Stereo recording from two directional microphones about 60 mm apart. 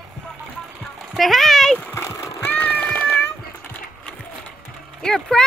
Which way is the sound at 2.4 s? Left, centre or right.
Left.